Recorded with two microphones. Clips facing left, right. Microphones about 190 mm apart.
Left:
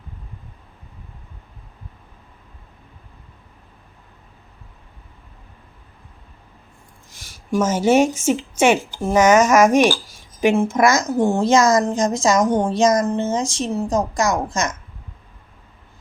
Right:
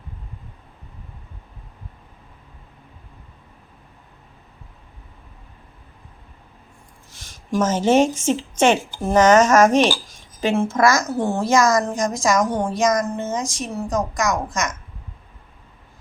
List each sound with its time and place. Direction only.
7.1 s a woman's voice: 10° left (ahead or behind); by 14.8 s 30° left (ahead or behind)